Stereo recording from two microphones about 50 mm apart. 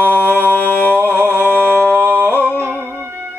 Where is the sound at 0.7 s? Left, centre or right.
Right.